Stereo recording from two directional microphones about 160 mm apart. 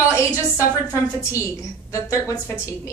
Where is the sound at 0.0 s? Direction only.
20° left (ahead or behind).